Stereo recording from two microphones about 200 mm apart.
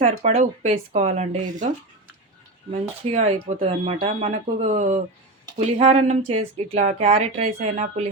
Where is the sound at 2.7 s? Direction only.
30° right (ahead or behind).